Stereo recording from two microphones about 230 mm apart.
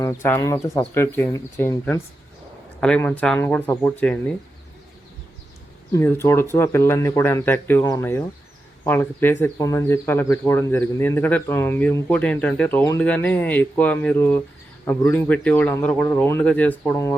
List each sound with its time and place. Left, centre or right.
0.0 s speech: centre
5.9 s speech: centre